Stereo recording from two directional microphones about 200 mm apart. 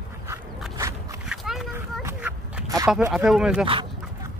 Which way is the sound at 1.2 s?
Centre (ahead or behind).